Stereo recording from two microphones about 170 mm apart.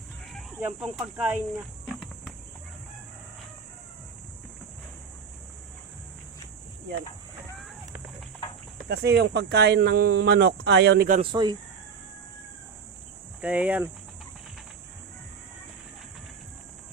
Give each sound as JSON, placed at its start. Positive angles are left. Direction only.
{"t": 0.6, "sound": "speech", "side_deg": -5}
{"t": 8.9, "sound": "speech", "side_deg": -70}
{"t": 11.2, "sound": "speech", "side_deg": -25}
{"t": 13.4, "sound": "speech", "side_deg": -10}